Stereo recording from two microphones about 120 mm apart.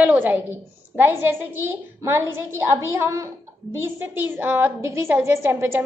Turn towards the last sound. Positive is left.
turn(degrees=-20)  # may be behind; listen again after turning